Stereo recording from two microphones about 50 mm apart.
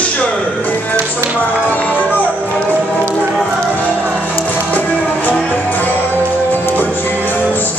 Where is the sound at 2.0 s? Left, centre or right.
Left.